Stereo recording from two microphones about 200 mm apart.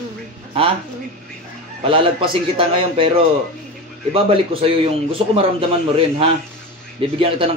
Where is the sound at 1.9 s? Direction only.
25° right (ahead or behind).